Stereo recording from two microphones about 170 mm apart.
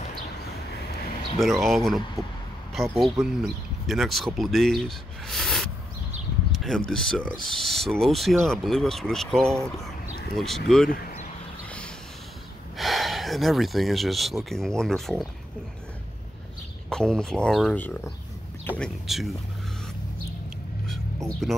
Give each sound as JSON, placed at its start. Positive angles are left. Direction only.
{"t": 1.4, "sound": "speech", "side_deg": 0}
{"t": 2.2, "sound": "speech", "side_deg": -20}
{"t": 2.7, "sound": "speech", "side_deg": 0}
{"t": 6.5, "sound": "a sound", "side_deg": 0}
{"t": 6.9, "sound": "speech", "side_deg": 5}
{"t": 10.9, "sound": "a sound", "side_deg": 55}
{"t": 12.7, "sound": "a sound", "side_deg": 0}
{"t": 14.5, "sound": "speech", "side_deg": 5}
{"t": 16.9, "sound": "speech", "side_deg": 5}
{"t": 18.8, "sound": "speech", "side_deg": 0}
{"t": 21.4, "sound": "speech", "side_deg": 0}